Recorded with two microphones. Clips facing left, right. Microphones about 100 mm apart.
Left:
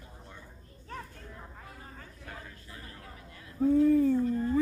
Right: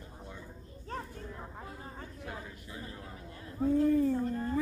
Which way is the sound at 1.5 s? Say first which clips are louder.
Right 3 dB; 25° right (ahead or behind).